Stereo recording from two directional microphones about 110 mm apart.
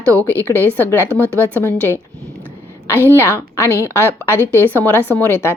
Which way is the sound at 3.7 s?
25° right (ahead or behind).